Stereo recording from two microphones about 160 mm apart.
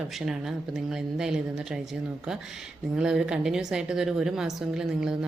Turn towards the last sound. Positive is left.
turn(degrees=-5)  # may be behind; listen again after turning